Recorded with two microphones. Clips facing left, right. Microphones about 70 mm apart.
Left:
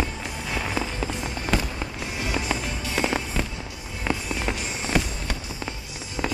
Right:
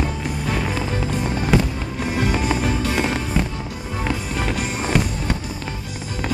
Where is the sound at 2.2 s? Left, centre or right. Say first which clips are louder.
Right 6 dB; right.